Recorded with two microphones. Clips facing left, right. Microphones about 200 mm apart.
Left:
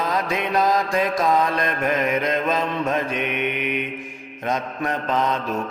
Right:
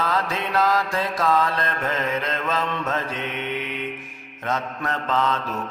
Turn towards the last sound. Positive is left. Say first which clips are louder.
# left 1 dB
turn(degrees=15)  # may be behind; listen again after turning